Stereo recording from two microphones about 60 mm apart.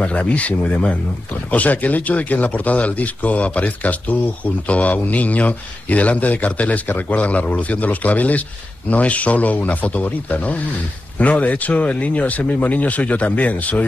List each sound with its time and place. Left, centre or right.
0.0 s speech: left